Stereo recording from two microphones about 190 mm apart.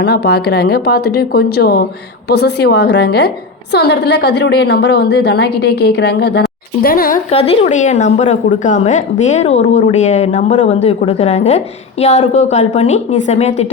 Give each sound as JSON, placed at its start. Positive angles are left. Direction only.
{"t": 0.0, "sound": "a woman's voice", "side_deg": 60}
{"t": 6.8, "sound": "speech", "side_deg": 50}
{"t": 7.3, "sound": "a woman's voice", "side_deg": 30}